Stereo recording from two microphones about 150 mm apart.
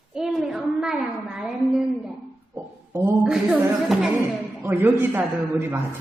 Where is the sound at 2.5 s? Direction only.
15° right (ahead or behind).